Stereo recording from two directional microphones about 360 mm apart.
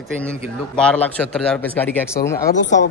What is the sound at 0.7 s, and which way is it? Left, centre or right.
A man's voice, centre.